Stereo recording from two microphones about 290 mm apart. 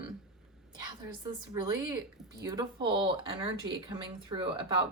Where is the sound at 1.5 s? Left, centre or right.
Centre.